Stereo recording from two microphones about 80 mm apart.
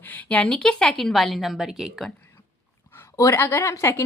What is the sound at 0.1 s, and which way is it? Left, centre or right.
Speech, centre.